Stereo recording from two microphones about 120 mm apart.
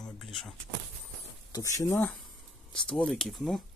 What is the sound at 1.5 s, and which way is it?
Speech, 25° left (ahead or behind).